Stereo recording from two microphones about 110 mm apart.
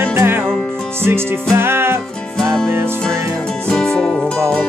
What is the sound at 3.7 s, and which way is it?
Music, 5° left (ahead or behind).